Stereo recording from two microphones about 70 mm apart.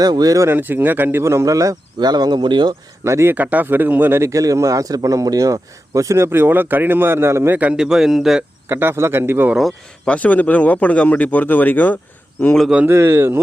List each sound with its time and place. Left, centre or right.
0.0 s speech: right
0.4 s speech: right
2.0 s speech: right
3.0 s speech: right
3.3 s speech: right
4.2 s speech: right
7.6 s a man's voice: centre
8.7 s speech: right
10.1 s speech: left
12.9 s speech: right